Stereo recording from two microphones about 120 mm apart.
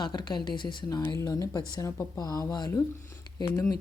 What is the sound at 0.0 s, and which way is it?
Speech, 40° left (ahead or behind).